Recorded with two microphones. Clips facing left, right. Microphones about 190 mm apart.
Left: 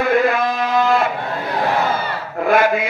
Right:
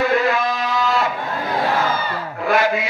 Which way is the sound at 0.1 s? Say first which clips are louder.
Left 2 dB; 55° left (ahead or behind).